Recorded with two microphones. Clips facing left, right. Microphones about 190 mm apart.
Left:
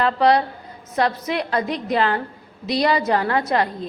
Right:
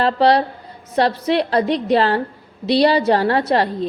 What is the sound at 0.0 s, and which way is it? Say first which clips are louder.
A woman's voice: right 2 dB; 30° right (ahead or behind).